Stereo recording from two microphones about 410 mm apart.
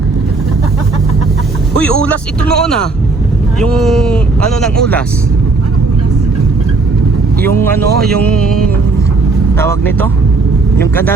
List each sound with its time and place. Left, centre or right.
1.8 s speech: centre
8.0 s speech: centre